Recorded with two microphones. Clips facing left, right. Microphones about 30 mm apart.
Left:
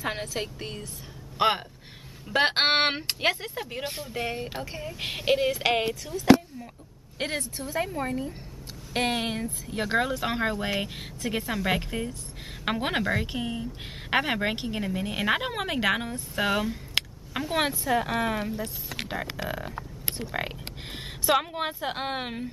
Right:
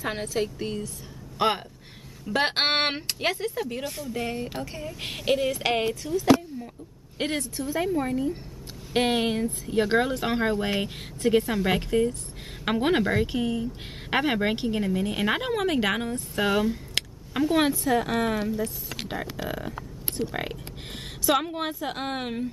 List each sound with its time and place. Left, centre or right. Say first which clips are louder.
0.0 s a woman's voice: right 3 dB; centre
3.8 s speech: right 1 dB; left
4.1 s a woman's voice: right 2 dB; centre
7.2 s speech: right 3 dB; centre
18.3 s speech: right 3 dB; left
19.4 s a woman's voice: right 1 dB; centre